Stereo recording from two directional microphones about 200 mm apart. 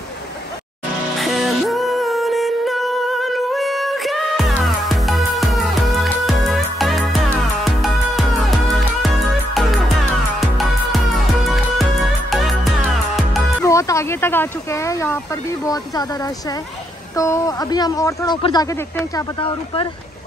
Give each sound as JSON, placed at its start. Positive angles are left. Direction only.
{"t": 1.1, "sound": "music", "side_deg": 0}
{"t": 13.7, "sound": "a sound", "side_deg": 15}
{"t": 15.6, "sound": "speech", "side_deg": 20}